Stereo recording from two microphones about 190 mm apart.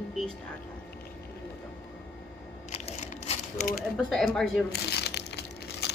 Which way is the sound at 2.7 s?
35° left (ahead or behind).